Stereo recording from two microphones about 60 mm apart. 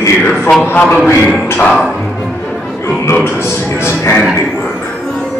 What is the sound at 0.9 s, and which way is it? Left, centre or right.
Music, centre.